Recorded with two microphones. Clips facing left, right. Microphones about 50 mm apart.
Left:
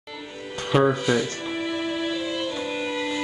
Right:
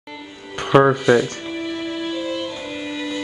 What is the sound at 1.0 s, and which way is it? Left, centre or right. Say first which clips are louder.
Speech: right 7 dB; centre.